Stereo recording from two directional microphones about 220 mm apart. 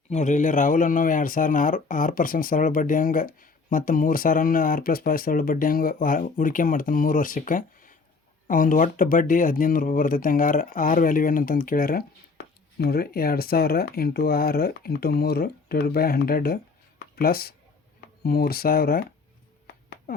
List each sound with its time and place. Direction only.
0.1 s speech: 35° left (ahead or behind)
20.1 s speech: 40° left (ahead or behind)